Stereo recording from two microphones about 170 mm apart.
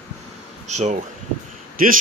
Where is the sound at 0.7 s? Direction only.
40° right (ahead or behind).